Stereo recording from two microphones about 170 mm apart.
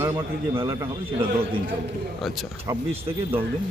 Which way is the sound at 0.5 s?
25° right (ahead or behind).